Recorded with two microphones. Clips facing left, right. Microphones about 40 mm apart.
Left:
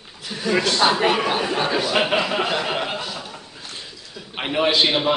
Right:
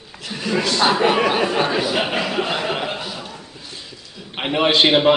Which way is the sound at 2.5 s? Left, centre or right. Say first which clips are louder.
Right 1 dB; centre.